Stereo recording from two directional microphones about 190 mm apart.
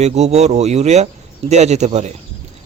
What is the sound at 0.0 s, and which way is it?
A man's voice, 35° right (ahead or behind).